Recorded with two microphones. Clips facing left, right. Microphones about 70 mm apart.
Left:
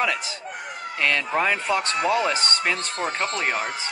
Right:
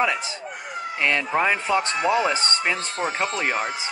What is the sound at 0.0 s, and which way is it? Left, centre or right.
Speech, right.